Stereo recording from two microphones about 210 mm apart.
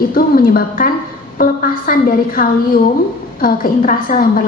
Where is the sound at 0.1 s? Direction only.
45° left (ahead or behind).